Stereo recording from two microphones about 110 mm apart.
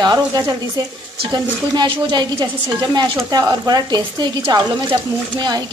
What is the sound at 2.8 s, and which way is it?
Speech, 35° right (ahead or behind).